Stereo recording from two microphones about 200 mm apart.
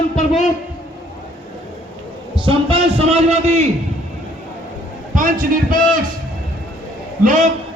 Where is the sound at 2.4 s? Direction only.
25° right (ahead or behind).